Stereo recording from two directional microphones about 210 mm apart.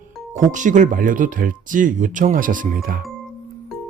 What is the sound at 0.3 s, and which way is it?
Speech, 35° right (ahead or behind).